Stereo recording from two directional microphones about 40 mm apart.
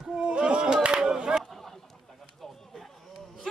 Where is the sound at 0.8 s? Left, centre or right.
Centre.